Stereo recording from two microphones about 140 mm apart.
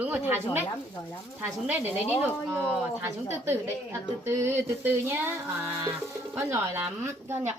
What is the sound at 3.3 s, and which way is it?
A child's voice, 20° right (ahead or behind).